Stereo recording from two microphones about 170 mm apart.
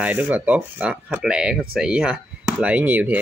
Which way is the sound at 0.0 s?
10° right (ahead or behind).